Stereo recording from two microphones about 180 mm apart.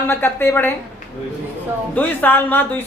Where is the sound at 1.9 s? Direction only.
10° left (ahead or behind).